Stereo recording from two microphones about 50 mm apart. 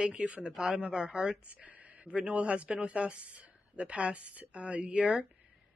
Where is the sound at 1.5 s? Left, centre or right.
Right.